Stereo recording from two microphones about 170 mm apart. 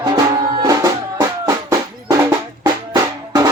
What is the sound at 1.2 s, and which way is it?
Music, 20° right (ahead or behind).